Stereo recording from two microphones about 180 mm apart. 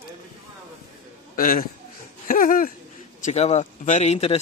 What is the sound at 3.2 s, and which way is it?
Speech, 40° left (ahead or behind).